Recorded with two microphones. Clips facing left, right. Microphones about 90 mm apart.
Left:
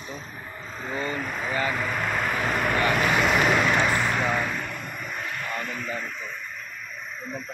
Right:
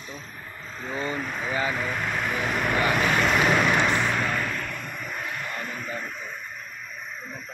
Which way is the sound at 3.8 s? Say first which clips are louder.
Even; 5° left (ahead or behind).